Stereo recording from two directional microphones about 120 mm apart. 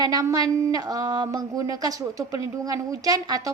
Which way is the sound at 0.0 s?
30° right (ahead or behind).